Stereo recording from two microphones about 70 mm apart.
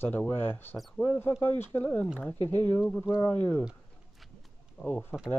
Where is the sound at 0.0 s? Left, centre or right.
Left.